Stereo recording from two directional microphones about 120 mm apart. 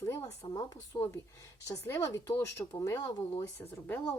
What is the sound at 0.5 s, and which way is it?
Speech, 30° left (ahead or behind).